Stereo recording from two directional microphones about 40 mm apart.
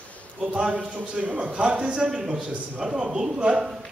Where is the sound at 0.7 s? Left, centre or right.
Right.